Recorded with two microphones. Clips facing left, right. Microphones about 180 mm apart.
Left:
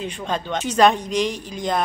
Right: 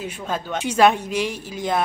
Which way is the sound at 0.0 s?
5° right (ahead or behind).